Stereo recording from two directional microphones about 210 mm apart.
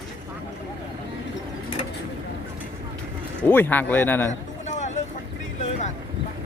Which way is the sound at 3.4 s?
10° left (ahead or behind).